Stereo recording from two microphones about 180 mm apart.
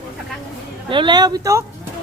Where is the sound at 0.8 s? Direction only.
25° right (ahead or behind).